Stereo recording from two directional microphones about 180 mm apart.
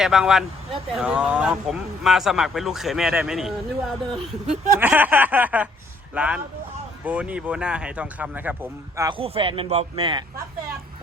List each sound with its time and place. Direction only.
0.0 s a man's voice: 5° right (ahead or behind)
9.0 s speech: 30° right (ahead or behind)